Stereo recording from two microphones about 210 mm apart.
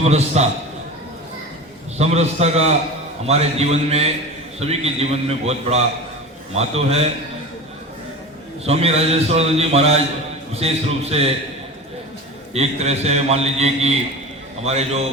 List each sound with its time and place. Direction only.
0.0 s a man's voice: 30° right (ahead or behind)
2.0 s a man's voice: 30° right (ahead or behind)
8.6 s a man's voice: 30° right (ahead or behind)
12.5 s a man's voice: 30° right (ahead or behind)